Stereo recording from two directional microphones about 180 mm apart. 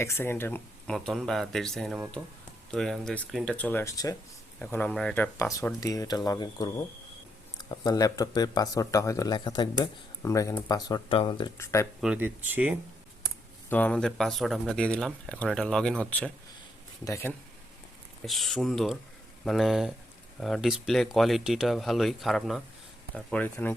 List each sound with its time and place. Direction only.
0.0 s speech: 15° left (ahead or behind)
11.5 s speech: 15° left (ahead or behind)
11.9 s speech: 5° right (ahead or behind)
13.7 s speech: 10° left (ahead or behind)
18.3 s speech: centre (ahead or behind)